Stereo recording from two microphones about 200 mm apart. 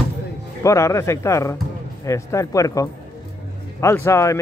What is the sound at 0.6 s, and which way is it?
Speech, 15° left (ahead or behind).